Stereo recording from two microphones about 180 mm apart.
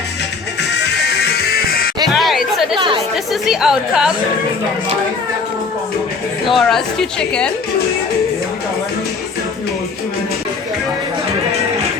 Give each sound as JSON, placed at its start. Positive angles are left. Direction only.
{"t": 0.9, "sound": "music", "side_deg": 65}
{"t": 2.0, "sound": "chatter", "side_deg": 0}
{"t": 2.7, "sound": "chatter", "side_deg": -30}
{"t": 3.4, "sound": "speech", "side_deg": 0}
{"t": 6.5, "sound": "speech", "side_deg": 0}